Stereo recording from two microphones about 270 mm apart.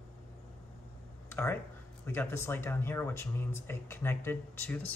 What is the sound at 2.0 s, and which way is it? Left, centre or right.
Speech, centre.